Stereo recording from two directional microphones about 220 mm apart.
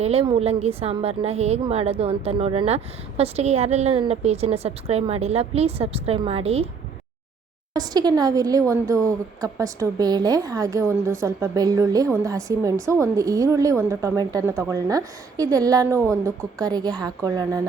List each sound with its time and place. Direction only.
0.0 s a woman's voice: 25° right (ahead or behind)
7.7 s speech: 20° right (ahead or behind)